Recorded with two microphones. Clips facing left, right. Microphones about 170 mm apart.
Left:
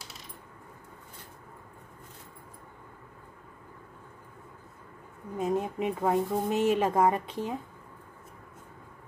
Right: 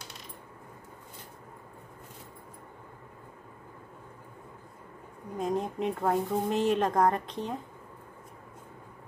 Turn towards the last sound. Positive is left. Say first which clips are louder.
# left 1 dB
turn(degrees=5)  # may be behind; listen again after turning